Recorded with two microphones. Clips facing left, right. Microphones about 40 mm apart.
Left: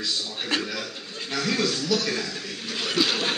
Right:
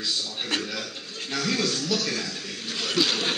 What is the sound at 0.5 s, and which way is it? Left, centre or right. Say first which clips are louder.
A man's voice: left 3 dB; centre.